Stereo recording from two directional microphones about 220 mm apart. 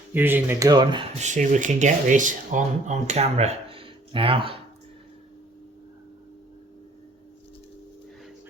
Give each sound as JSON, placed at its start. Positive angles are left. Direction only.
{"t": 0.1, "sound": "speech", "side_deg": -10}
{"t": 1.2, "sound": "speech", "side_deg": -35}